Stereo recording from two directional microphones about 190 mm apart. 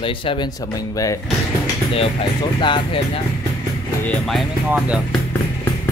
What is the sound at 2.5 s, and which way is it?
Speech, 25° left (ahead or behind).